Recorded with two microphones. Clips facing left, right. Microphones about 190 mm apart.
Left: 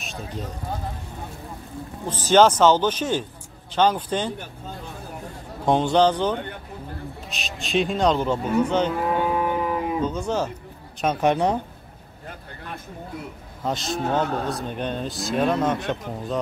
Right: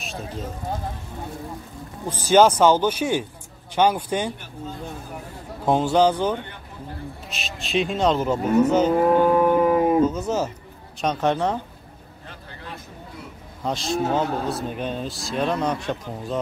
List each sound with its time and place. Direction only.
0.0 s speech: centre (ahead or behind)
2.0 s a man's voice: 10° right (ahead or behind)
5.7 s a man's voice: 5° right (ahead or behind)
9.0 s cattle: 50° right (ahead or behind)
10.0 s speech: 5° right (ahead or behind)
11.0 s speech: 10° left (ahead or behind)
13.6 s speech: centre (ahead or behind)